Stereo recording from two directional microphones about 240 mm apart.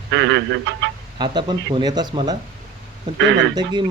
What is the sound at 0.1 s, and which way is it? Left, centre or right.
Speech, right.